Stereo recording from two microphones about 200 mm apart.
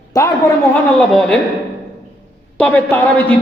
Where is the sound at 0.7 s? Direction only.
5° left (ahead or behind).